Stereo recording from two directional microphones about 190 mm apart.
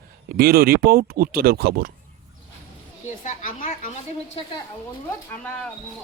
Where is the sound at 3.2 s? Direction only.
40° left (ahead or behind).